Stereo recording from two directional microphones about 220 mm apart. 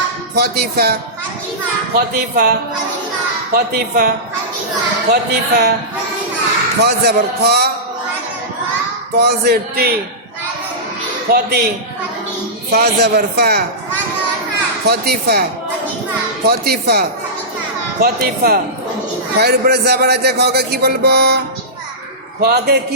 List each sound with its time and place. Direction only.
0.3 s a man's voice: 45° right (ahead or behind)
2.0 s a man's voice: 45° right (ahead or behind)
5.1 s a man's voice: 45° right (ahead or behind)
6.8 s a man's voice: 45° right (ahead or behind)
9.1 s a man's voice: 50° right (ahead or behind)
11.3 s a man's voice: 45° right (ahead or behind)
12.7 s a man's voice: 45° right (ahead or behind)
14.8 s a man's voice: 45° right (ahead or behind)
16.5 s a man's voice: 45° right (ahead or behind)